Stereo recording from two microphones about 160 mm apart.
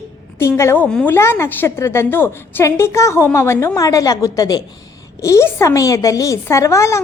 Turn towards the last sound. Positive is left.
turn(degrees=20)  # may be behind; listen again after turning